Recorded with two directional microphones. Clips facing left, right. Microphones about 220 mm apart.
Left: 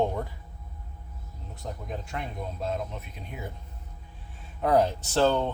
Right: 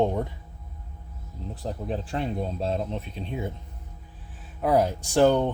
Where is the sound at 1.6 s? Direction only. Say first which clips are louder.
Right 6 dB; 30° right (ahead or behind).